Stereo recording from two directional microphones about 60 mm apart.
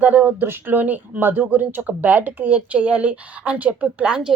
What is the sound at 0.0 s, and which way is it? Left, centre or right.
Speech, right.